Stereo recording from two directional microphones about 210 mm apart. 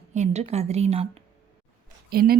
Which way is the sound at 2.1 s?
45° right (ahead or behind).